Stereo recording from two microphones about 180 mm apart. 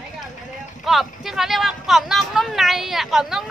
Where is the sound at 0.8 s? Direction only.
Centre (ahead or behind).